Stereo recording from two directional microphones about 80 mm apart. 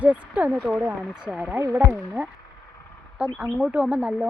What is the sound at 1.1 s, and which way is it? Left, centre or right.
Speech, centre.